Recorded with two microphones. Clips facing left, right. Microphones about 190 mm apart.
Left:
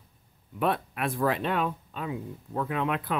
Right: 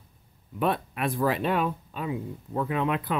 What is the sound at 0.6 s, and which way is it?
Speech, centre (ahead or behind).